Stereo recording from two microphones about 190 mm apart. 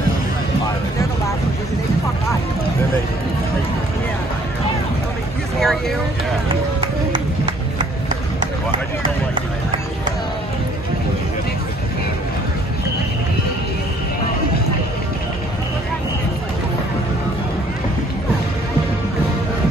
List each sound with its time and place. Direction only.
5.6 s vehicle: centre (ahead or behind)
6.5 s run: 25° right (ahead or behind)